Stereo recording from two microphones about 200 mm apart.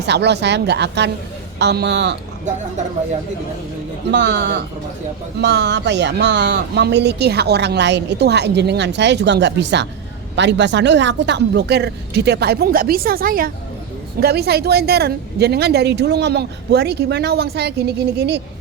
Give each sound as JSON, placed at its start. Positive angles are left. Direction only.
{"t": 0.0, "sound": "speech", "side_deg": -60}
{"t": 2.5, "sound": "speech", "side_deg": -35}
{"t": 4.1, "sound": "speech", "side_deg": -60}